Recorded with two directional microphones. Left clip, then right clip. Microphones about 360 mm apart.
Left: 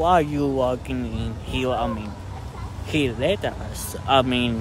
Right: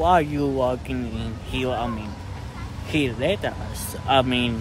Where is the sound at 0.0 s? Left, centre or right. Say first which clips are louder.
Even; centre.